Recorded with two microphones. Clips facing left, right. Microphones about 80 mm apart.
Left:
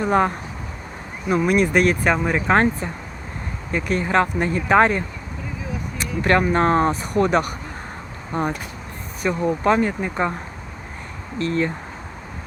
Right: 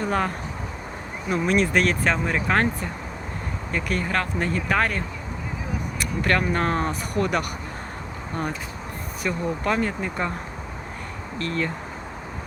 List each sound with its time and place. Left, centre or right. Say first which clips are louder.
0.0 s speech: left 6 dB; left
1.3 s speech: left 4 dB; centre
2.5 s speech: left 6 dB; left
6.0 s a sound: left 5 dB; left
6.5 s speech: left 6 dB; left
11.3 s speech: left 5 dB; left